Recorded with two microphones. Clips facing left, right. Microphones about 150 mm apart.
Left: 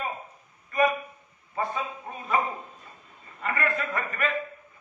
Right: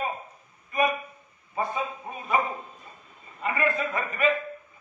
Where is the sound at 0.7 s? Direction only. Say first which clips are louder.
Left 1 dB; 15° right (ahead or behind).